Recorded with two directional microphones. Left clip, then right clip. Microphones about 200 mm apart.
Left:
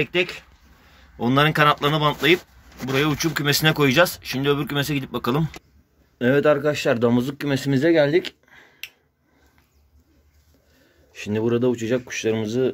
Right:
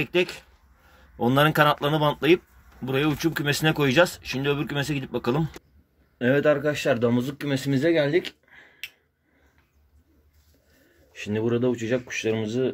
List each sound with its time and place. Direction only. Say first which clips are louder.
0.0 s speech: left 2 dB; 20° right (ahead or behind)
6.1 s speech: left 3 dB; 20° left (ahead or behind)
8.5 s a sound: left 1 dB; 20° left (ahead or behind)
11.1 s speech: left 3 dB; 25° left (ahead or behind)
11.4 s speech: left 3 dB; 15° left (ahead or behind)